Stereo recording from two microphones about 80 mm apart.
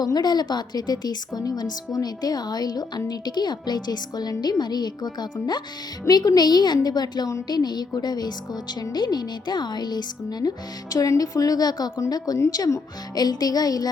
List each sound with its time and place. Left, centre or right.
0.0 s a woman's voice: left
10.9 s speech: left